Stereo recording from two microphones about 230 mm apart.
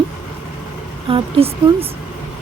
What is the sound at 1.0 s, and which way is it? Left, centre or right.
Speech, right.